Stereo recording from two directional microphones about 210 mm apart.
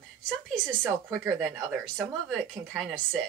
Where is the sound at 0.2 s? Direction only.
5° left (ahead or behind).